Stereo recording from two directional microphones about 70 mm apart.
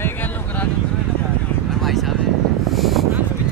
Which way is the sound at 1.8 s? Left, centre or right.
Centre.